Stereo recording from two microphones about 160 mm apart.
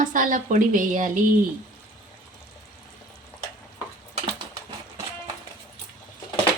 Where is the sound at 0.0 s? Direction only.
55° right (ahead or behind).